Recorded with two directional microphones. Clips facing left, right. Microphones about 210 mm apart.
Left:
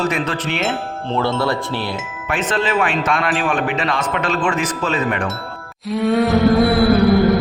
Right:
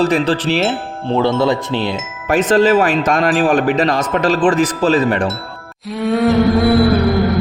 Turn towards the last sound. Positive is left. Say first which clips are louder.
# left 1 dB
turn(degrees=0)  # may be behind; listen again after turning